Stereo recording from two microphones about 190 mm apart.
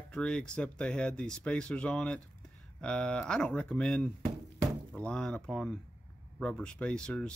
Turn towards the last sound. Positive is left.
turn(degrees=5)  # may be behind; listen again after turning